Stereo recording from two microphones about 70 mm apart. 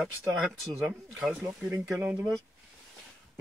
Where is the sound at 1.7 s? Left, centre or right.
Right.